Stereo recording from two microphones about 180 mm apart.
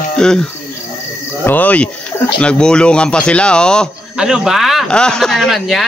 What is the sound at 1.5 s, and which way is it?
A man's voice, 10° left (ahead or behind).